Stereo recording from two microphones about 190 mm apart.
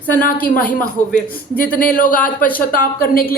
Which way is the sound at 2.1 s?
10° left (ahead or behind).